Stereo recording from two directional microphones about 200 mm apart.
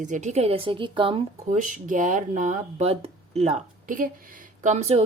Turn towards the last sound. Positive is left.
turn(degrees=-30)  # may be behind; listen again after turning